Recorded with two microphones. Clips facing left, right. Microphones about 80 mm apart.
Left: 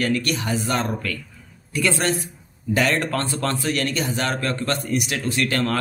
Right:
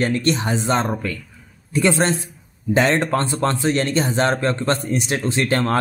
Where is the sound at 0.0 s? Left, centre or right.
Right.